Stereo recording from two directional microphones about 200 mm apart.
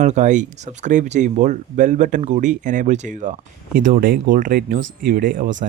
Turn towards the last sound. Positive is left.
turn(degrees=-40)  # may be behind; listen again after turning